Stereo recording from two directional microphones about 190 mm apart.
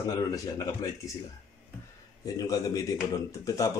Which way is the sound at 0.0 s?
20° left (ahead or behind).